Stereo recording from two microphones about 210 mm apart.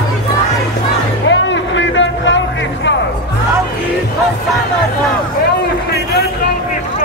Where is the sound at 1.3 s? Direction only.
60° left (ahead or behind).